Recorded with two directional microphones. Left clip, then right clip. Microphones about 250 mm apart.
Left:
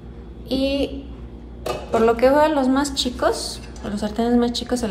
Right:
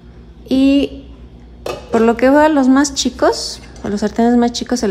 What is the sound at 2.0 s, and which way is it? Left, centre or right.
A woman's voice, right.